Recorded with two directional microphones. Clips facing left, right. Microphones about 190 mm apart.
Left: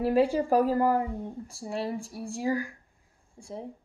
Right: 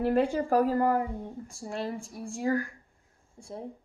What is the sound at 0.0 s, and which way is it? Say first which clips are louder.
Speech: left 2 dB; 5° left (ahead or behind).